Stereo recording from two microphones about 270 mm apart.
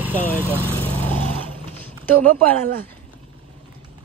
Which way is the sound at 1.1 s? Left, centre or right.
Centre.